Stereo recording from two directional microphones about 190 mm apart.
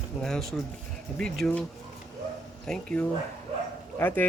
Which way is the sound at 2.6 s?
5° left (ahead or behind).